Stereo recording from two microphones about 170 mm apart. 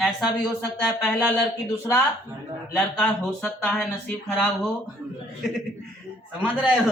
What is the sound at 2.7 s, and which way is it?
Speech, 10° left (ahead or behind).